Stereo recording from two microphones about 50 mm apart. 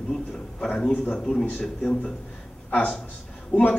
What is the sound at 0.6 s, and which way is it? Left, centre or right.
Speech, centre.